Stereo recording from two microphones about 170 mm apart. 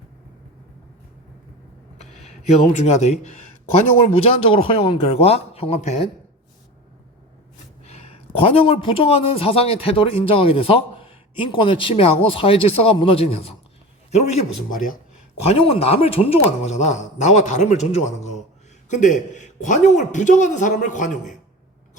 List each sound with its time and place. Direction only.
2.7 s speech: 40° left (ahead or behind)
4.2 s speech: 35° left (ahead or behind)
7.9 s speech: 35° left (ahead or behind)
14.2 s speech: 45° left (ahead or behind)
15.4 s speech: 35° left (ahead or behind)